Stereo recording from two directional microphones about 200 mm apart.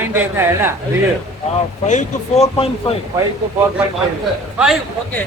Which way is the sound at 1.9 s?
35° left (ahead or behind).